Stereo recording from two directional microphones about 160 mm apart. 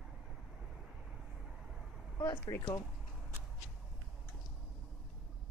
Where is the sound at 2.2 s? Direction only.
20° left (ahead or behind).